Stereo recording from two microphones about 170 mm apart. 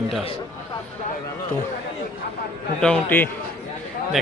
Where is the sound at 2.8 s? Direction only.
10° left (ahead or behind).